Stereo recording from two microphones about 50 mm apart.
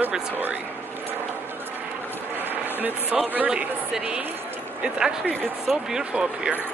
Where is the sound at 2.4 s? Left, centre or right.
Right.